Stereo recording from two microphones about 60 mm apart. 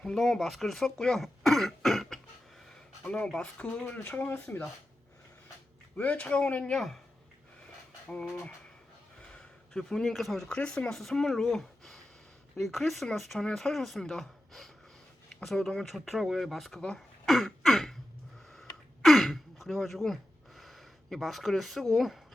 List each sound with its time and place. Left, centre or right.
0.0 s speech: centre
3.0 s speech: centre
6.0 s speech: left
6.7 s speech: centre
8.2 s speech: centre
18.5 s throat clearing: centre
20.6 s a sound: centre
21.9 s speech: centre